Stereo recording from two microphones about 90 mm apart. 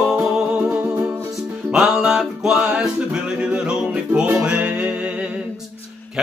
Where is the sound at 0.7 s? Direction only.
20° right (ahead or behind).